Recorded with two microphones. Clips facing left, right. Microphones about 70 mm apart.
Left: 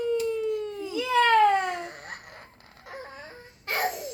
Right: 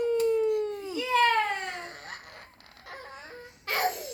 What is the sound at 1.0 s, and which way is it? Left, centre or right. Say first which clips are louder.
Babbling: left 4 dB; left.